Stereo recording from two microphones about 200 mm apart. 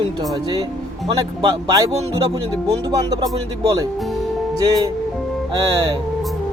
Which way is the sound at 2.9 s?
20° right (ahead or behind).